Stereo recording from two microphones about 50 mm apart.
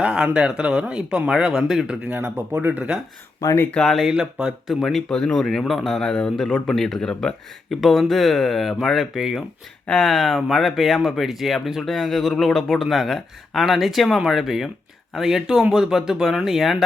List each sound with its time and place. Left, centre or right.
0.0 s speech: centre
2.0 s speech: right
3.4 s speech: left
3.8 s speech: centre
4.1 s speech: centre
4.8 s a man's voice: centre
7.7 s speech: centre